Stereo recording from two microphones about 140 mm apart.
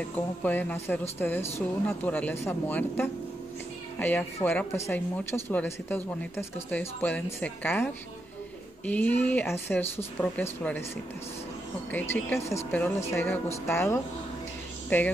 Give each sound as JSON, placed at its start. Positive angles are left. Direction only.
{"t": 0.1, "sound": "a woman's voice", "side_deg": 10}
{"t": 11.9, "sound": "a woman's voice", "side_deg": 10}